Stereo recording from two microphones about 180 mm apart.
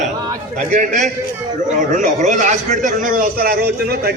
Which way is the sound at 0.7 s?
40° right (ahead or behind).